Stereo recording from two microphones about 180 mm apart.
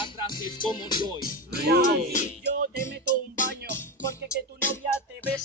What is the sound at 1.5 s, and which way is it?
Music, 60° right (ahead or behind).